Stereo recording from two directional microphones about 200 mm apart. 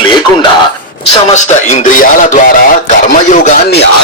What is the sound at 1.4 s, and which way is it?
Speech, 35° left (ahead or behind).